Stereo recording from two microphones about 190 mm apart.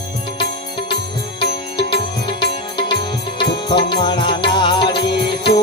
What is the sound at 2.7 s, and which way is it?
Music, 25° left (ahead or behind).